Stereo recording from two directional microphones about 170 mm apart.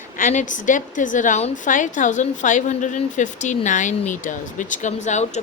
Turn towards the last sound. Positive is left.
turn(degrees=45)  # may be behind; listen again after turning